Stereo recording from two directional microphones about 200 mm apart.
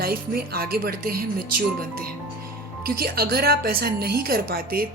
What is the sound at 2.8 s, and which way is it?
A woman's voice, 50° right (ahead or behind).